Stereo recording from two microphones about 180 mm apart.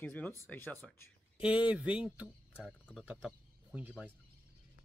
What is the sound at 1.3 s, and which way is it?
Speech, 5° right (ahead or behind).